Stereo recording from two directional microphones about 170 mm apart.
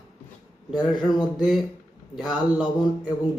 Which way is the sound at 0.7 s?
25° left (ahead or behind).